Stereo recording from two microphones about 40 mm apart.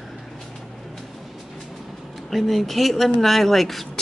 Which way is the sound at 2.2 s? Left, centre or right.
Centre.